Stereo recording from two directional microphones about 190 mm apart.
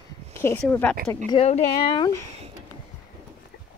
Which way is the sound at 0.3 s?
15° left (ahead or behind).